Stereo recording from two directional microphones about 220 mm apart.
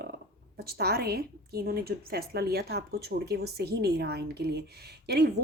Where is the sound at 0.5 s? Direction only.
45° right (ahead or behind).